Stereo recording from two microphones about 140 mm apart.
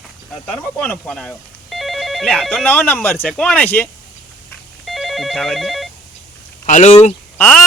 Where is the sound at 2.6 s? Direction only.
10° left (ahead or behind).